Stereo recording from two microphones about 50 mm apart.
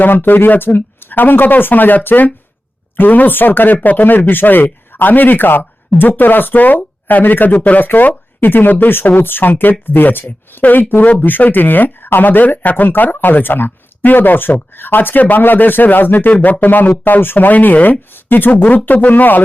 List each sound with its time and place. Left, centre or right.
0.0 s speech: left